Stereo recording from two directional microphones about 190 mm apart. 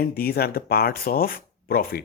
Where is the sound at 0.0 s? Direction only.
55° left (ahead or behind).